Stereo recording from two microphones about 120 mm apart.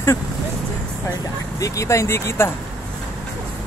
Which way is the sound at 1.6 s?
25° left (ahead or behind).